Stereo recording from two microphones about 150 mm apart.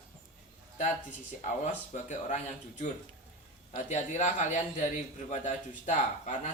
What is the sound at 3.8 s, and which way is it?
A man's voice, 50° left (ahead or behind).